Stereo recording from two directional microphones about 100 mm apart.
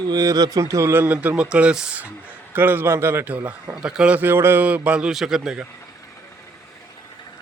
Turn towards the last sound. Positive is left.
turn(degrees=-5)  # may be behind; listen again after turning